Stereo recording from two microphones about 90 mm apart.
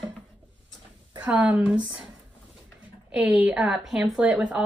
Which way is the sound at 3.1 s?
15° right (ahead or behind).